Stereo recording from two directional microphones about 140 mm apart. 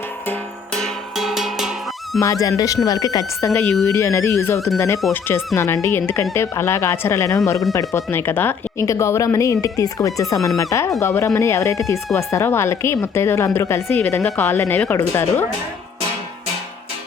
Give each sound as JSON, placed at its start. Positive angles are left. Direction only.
{"t": 0.3, "sound": "music", "side_deg": 5}
{"t": 2.2, "sound": "speech", "side_deg": 20}